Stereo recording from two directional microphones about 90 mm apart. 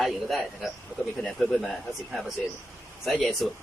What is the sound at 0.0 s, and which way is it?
Speech, centre (ahead or behind).